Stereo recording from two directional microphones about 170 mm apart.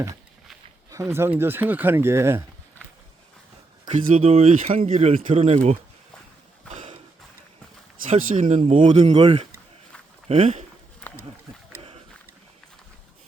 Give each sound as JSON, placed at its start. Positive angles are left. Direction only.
{"t": 1.1, "sound": "speech", "side_deg": -15}
{"t": 4.0, "sound": "speech", "side_deg": -45}
{"t": 6.7, "sound": "horse", "side_deg": -45}
{"t": 8.4, "sound": "speech", "side_deg": -45}
{"t": 9.1, "sound": "speech", "side_deg": -30}
{"t": 11.0, "sound": "wild animals", "side_deg": 10}